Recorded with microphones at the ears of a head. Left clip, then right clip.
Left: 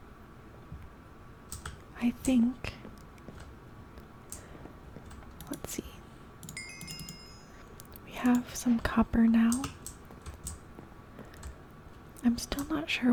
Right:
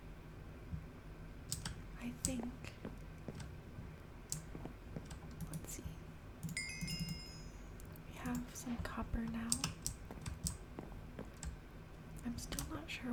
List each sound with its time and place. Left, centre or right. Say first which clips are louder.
2.0 s speech: left 16 dB; left
6.5 s wind chime: left 1 dB; centre
8.1 s speech: left 16 dB; left
12.2 s speech: left 15 dB; left